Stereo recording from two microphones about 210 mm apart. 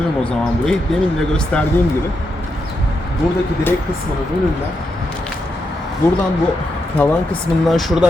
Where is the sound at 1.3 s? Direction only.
5° left (ahead or behind).